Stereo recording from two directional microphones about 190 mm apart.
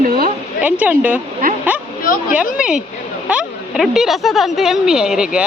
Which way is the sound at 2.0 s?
45° left (ahead or behind).